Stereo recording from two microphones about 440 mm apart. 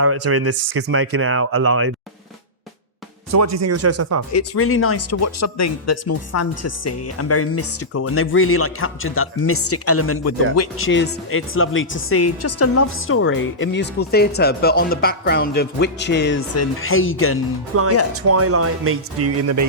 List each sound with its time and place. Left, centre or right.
0.0 s speech: right
3.3 s speech: right
4.3 s speech: left
17.7 s speech: right